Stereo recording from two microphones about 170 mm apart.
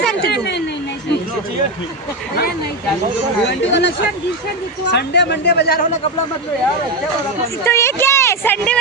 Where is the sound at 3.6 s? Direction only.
90° left; by 5.9 s 70° left (ahead or behind).